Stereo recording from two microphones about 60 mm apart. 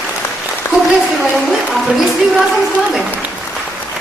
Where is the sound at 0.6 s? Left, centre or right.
Left.